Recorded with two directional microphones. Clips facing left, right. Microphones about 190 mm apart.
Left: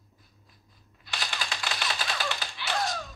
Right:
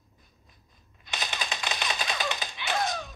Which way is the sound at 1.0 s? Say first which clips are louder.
Right 1 dB; 20° right (ahead or behind).